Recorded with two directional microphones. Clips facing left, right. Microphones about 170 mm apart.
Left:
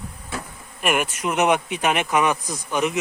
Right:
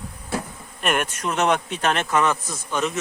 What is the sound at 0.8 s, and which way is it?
Speech, 5° left (ahead or behind).